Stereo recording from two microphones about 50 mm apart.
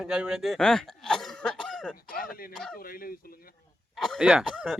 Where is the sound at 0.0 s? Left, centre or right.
Centre.